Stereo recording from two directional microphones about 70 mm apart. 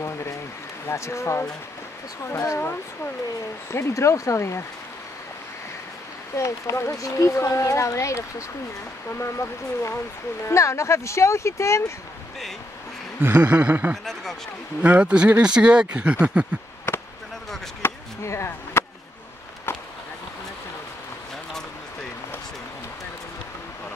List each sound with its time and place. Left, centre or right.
0.8 s speech: left
3.9 s speech: left
6.3 s speech: left
13.2 s a sound: right
14.8 s speech: centre
17.8 s chop: left